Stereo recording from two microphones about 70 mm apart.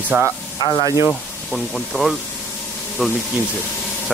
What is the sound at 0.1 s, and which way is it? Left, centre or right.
Speech, right.